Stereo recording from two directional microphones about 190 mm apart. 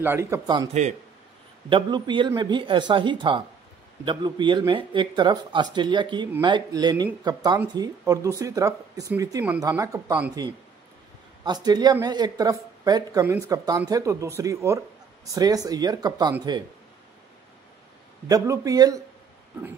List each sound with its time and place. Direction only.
0.0 s speech: 15° right (ahead or behind)
1.7 s speech: 25° right (ahead or behind)
11.4 s speech: 20° right (ahead or behind)
18.3 s speech: 20° right (ahead or behind)